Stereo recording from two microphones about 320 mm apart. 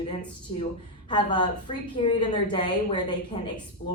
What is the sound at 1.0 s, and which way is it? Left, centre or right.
A woman's voice, centre.